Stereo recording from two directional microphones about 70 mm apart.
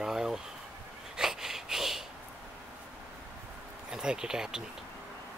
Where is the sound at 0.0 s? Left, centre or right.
Centre.